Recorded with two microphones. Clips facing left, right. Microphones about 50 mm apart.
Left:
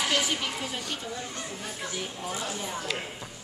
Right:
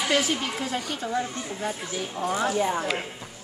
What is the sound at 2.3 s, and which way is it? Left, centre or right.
Speech, right.